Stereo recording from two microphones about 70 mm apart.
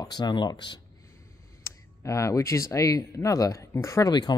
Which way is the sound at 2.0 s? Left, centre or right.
Left.